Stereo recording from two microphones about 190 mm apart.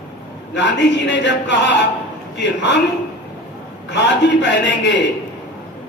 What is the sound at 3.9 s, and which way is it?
A man's voice, 70° left (ahead or behind).